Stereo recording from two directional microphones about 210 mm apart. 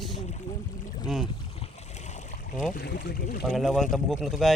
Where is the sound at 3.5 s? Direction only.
Centre (ahead or behind).